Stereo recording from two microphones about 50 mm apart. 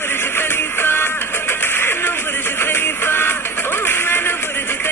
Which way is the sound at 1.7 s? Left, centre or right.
Left.